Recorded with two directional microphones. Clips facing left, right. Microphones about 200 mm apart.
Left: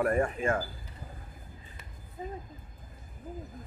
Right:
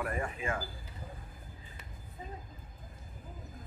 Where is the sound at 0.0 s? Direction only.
45° left (ahead or behind).